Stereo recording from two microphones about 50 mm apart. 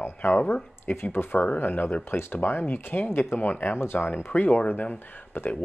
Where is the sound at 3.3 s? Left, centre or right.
Left.